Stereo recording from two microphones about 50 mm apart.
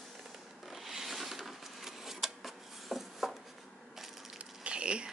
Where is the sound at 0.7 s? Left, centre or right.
Centre.